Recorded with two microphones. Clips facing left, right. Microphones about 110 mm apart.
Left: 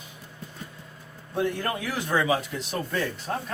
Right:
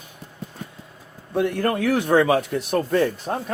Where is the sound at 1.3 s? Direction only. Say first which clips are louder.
Right 6 dB; 60° right (ahead or behind).